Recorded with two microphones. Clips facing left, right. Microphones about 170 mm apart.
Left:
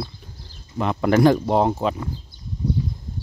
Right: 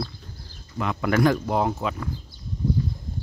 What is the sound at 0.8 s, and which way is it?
Speech, 30° left (ahead or behind).